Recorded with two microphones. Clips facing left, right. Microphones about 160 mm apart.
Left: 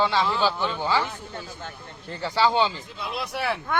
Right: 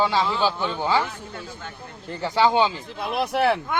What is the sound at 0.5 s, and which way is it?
Speech, 15° right (ahead or behind).